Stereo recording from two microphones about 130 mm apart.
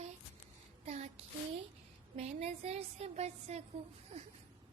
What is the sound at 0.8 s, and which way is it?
A woman's voice, 55° right (ahead or behind).